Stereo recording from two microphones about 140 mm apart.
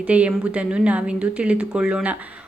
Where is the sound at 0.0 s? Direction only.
10° right (ahead or behind).